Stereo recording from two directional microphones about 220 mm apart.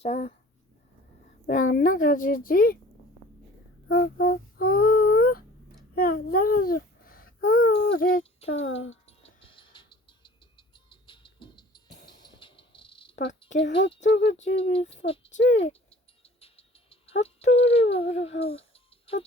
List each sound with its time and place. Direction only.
0.0 s speech: 30° left (ahead or behind)
1.5 s a child's voice: 35° left (ahead or behind)
3.8 s a sound: 45° left (ahead or behind)
5.9 s a child's voice: 45° left (ahead or behind)
8.4 s speech: 60° left (ahead or behind)
9.0 s a sound: 25° left (ahead or behind)
12.0 s cricket: 20° left (ahead or behind)
13.6 s speech: 55° left (ahead or behind)
14.5 s speech: 25° left (ahead or behind)
15.9 s a sound: 25° left (ahead or behind)
18.3 s cricket: 25° left (ahead or behind)